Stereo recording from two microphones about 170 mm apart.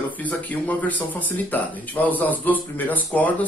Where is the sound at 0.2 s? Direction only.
10° left (ahead or behind).